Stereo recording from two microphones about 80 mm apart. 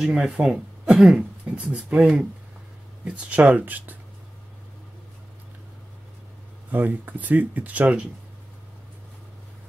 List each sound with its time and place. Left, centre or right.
0.0 s speech: centre
6.7 s speech: right